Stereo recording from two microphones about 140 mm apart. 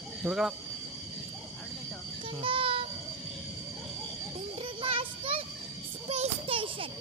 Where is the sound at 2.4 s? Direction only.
40° right (ahead or behind).